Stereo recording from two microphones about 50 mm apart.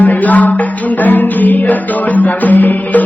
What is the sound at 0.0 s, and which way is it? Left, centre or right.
Music, left.